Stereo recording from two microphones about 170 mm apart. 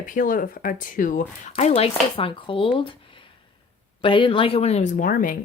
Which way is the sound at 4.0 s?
30° left (ahead or behind).